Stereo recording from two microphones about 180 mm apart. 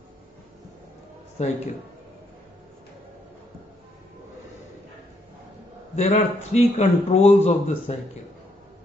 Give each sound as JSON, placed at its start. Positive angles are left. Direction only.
{"t": 5.9, "sound": "a man's voice", "side_deg": 35}